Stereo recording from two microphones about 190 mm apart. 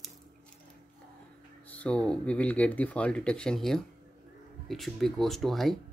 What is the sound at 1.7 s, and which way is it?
Speech, 5° left (ahead or behind).